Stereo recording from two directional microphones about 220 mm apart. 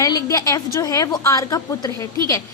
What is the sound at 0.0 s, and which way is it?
A woman's voice, 15° left (ahead or behind).